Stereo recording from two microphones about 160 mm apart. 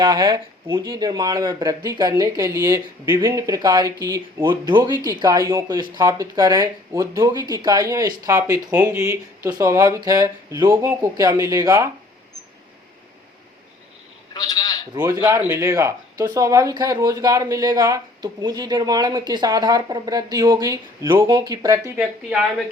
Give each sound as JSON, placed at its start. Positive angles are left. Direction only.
{"t": 0.0, "sound": "speech", "side_deg": -25}
{"t": 14.3, "sound": "a sound", "side_deg": 25}
{"t": 14.9, "sound": "speech", "side_deg": -20}